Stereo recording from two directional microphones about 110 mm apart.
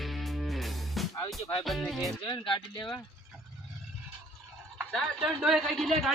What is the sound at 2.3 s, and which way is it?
Speech, 45° left (ahead or behind).